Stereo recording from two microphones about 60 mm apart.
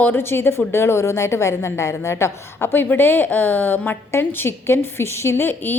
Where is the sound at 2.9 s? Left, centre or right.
Left.